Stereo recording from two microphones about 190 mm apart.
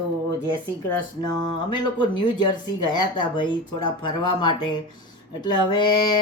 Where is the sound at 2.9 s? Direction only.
25° left (ahead or behind).